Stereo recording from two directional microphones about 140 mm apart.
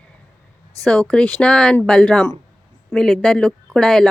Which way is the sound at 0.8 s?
5° left (ahead or behind).